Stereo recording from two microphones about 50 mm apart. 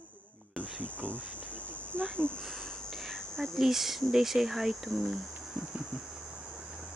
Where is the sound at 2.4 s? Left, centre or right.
Centre.